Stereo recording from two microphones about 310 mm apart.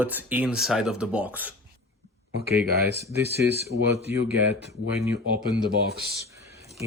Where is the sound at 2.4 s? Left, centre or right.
Right.